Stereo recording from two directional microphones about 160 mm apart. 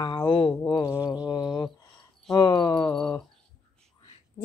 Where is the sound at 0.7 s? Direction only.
25° left (ahead or behind).